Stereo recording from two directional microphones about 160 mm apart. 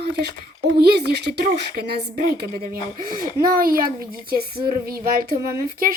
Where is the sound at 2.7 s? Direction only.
60° right (ahead or behind).